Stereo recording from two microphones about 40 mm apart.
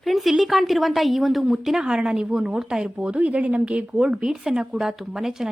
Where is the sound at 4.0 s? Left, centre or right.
Right.